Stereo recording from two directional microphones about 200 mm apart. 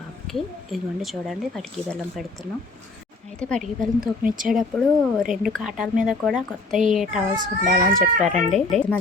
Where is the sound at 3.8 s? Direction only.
45° right (ahead or behind).